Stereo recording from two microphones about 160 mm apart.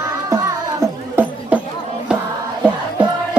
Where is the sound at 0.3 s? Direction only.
20° right (ahead or behind).